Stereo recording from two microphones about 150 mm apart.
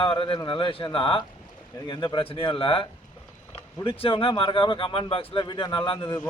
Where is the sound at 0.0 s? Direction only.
35° left (ahead or behind).